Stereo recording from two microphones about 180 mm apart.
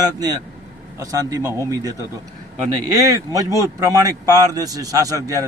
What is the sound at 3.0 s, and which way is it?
A man's voice, 20° right (ahead or behind).